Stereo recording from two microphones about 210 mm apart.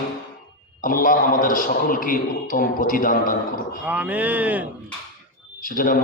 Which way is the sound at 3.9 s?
10° right (ahead or behind).